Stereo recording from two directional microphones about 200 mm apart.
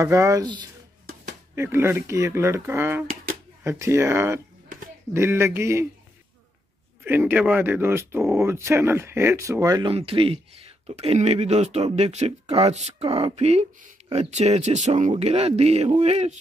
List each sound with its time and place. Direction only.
0.0 s speech: 15° right (ahead or behind)
7.1 s speech: 10° right (ahead or behind); by 16.3 s 35° right (ahead or behind)